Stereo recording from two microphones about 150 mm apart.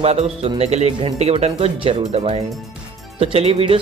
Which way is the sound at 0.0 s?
45° right (ahead or behind).